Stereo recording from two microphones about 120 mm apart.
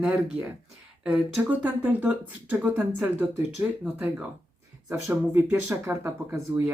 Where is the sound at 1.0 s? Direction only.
10° right (ahead or behind).